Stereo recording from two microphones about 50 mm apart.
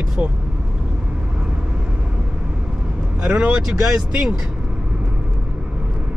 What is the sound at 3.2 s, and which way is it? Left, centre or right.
Speech, right.